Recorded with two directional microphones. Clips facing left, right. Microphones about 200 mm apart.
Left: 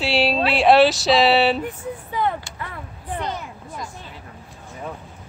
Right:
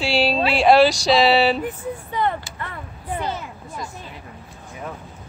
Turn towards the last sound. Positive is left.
turn(degrees=-5)  # may be behind; listen again after turning